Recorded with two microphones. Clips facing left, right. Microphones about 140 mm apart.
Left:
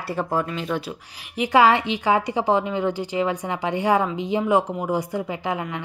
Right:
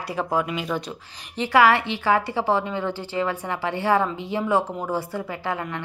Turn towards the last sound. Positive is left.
turn(degrees=15)  # may be behind; listen again after turning